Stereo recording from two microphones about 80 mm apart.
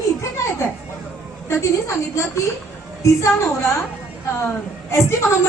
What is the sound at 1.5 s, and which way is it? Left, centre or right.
A woman's voice, left.